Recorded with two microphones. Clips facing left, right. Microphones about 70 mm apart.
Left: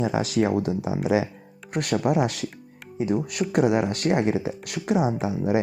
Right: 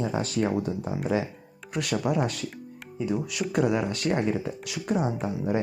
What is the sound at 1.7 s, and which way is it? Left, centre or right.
Speech, left.